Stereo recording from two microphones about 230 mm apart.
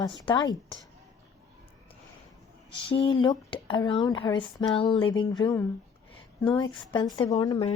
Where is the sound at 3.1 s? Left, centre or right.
Left.